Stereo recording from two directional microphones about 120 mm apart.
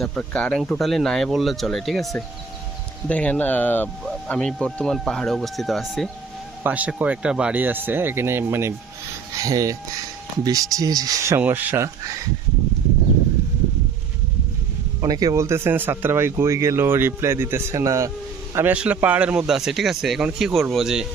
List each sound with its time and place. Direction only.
0.0 s a man's voice: 5° left (ahead or behind)
3.1 s speech: 10° left (ahead or behind)
4.0 s a man's voice: 5° left (ahead or behind)
6.6 s speech: 10° right (ahead or behind)
15.0 s speech: 30° right (ahead or behind)
18.5 s a man's voice: 15° right (ahead or behind)